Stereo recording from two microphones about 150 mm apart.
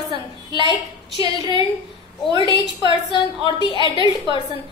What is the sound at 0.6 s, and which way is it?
Speech, 30° right (ahead or behind).